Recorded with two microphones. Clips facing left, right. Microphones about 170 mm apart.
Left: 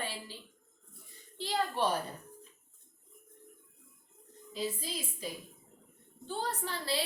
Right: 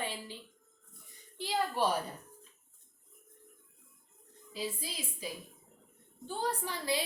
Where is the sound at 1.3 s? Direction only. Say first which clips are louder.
Even; 10° right (ahead or behind).